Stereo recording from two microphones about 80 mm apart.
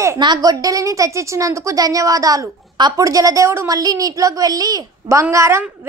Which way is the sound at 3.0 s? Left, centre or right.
Right.